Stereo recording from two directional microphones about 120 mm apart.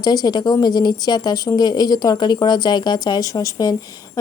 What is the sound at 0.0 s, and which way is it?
Speech, 30° left (ahead or behind).